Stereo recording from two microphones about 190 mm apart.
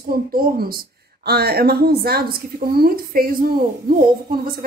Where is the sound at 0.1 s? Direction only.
50° right (ahead or behind).